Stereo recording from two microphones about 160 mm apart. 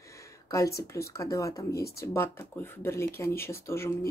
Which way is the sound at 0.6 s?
80° left.